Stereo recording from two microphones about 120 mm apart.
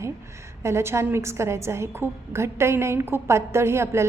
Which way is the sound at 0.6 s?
20° right (ahead or behind).